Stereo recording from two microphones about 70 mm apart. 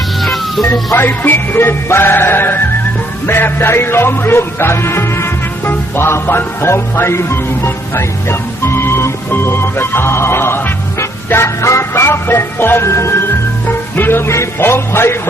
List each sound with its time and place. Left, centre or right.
0.2 s music: centre
0.9 s music: left
13.7 s music: left